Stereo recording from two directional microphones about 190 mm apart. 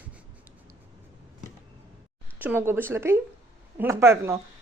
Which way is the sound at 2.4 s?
10° right (ahead or behind).